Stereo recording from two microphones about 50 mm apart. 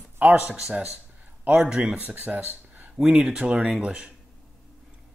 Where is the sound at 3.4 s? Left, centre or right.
Right.